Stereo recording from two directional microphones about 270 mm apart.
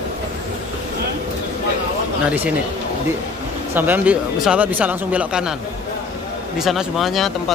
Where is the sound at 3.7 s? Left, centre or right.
Centre.